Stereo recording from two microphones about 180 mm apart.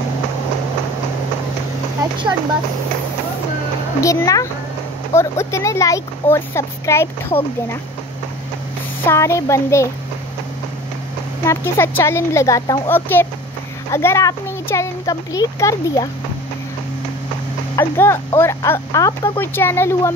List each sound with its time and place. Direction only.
4.0 s speech: 15° left (ahead or behind)
9.0 s speech: 15° left (ahead or behind)
11.4 s speech: 15° left (ahead or behind)
17.7 s speech: 15° left (ahead or behind)